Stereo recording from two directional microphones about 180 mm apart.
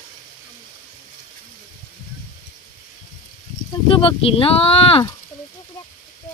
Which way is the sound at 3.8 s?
30° left (ahead or behind).